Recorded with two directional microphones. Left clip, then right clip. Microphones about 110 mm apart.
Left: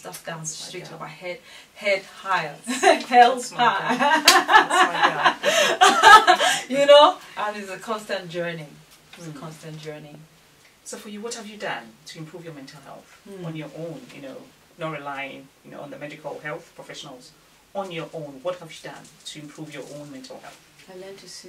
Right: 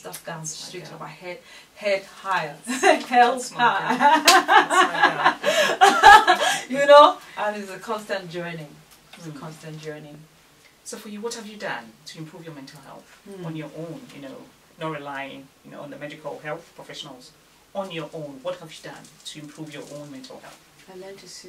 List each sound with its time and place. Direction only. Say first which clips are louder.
0.0 s speech: even; 15° left (ahead or behind)
1.8 s speech: left 1 dB; 15° left (ahead or behind)
9.7 s speech: even; 5° right (ahead or behind)
11.2 s speech: right 1 dB; 10° right (ahead or behind)
14.8 s speech: even; 10° right (ahead or behind)
17.7 s speech: even; 15° right (ahead or behind)
20.9 s speech: left 1 dB; centre (ahead or behind)